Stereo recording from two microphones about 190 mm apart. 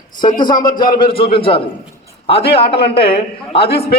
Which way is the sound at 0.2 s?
25° left (ahead or behind).